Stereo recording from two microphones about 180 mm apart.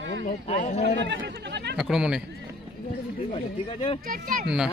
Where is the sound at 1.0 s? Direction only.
75° right (ahead or behind).